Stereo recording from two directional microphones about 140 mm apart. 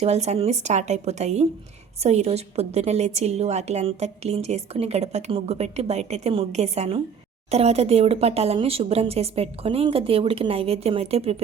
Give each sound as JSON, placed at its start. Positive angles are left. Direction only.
{"t": 0.0, "sound": "a woman's voice", "side_deg": -50}